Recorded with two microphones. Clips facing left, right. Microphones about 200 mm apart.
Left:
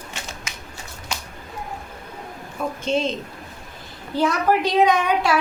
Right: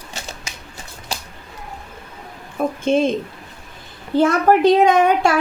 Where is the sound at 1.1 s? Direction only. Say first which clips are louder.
Right 2 dB; 30° right (ahead or behind).